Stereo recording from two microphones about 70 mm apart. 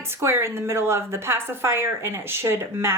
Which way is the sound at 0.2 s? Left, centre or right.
Right.